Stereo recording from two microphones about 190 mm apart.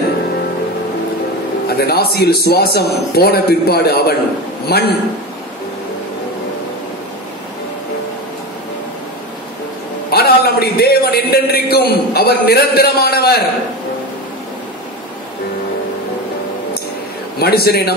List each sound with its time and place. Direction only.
1.8 s a man's voice: 55° left (ahead or behind)
10.1 s a sound: 55° left (ahead or behind)
17.4 s a man's voice: 55° left (ahead or behind)